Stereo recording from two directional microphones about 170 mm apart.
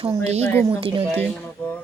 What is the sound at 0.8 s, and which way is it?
Speech, 35° right (ahead or behind).